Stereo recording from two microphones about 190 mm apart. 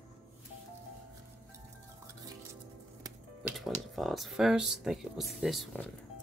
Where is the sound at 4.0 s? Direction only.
Centre (ahead or behind).